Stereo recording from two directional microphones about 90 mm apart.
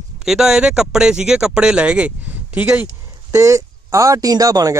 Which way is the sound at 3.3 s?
35° right (ahead or behind).